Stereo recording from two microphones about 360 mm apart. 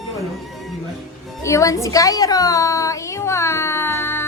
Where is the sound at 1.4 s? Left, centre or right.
Centre.